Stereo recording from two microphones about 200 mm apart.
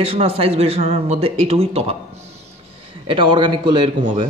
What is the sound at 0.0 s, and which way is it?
Speech, 30° right (ahead or behind).